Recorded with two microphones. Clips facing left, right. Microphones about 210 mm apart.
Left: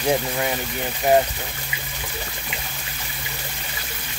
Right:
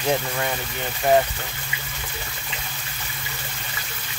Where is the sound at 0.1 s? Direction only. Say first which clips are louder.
Left 2 dB; 10° left (ahead or behind).